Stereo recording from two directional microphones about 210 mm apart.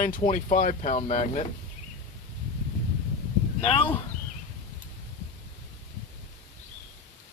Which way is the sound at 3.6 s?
25° left (ahead or behind).